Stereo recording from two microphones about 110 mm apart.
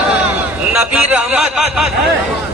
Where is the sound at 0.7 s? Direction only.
10° right (ahead or behind).